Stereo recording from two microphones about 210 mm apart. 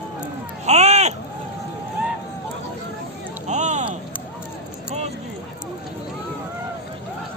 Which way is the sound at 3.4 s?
35° right (ahead or behind).